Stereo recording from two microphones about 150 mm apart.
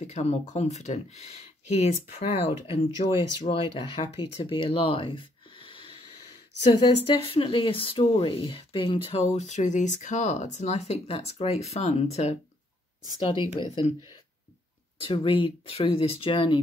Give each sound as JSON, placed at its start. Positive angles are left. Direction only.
{"t": 0.0, "sound": "speech", "side_deg": 50}
{"t": 3.0, "sound": "speech", "side_deg": 50}
{"t": 3.4, "sound": "speech", "side_deg": 40}
{"t": 4.4, "sound": "a sound", "side_deg": 40}
{"t": 6.7, "sound": "speech", "side_deg": 40}
{"t": 13.3, "sound": "speech", "side_deg": 35}
{"t": 15.0, "sound": "speech", "side_deg": 35}